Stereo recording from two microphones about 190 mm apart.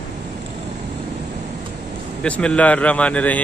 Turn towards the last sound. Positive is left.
turn(degrees=5)  # may be behind; listen again after turning